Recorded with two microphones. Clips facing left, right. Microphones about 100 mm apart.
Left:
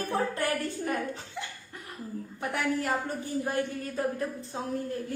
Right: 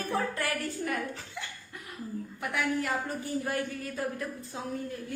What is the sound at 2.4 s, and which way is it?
Speech, 40° left (ahead or behind).